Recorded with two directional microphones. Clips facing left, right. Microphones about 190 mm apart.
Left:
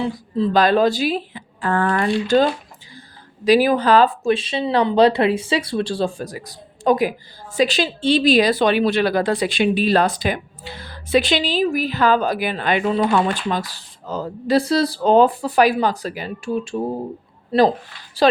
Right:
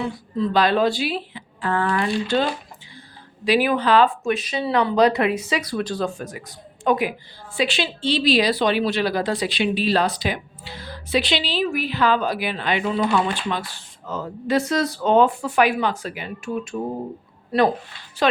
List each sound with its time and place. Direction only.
0.5 s speech: 45° left (ahead or behind)